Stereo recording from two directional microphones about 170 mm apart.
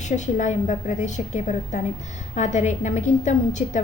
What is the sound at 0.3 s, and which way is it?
A woman's voice, 45° left (ahead or behind).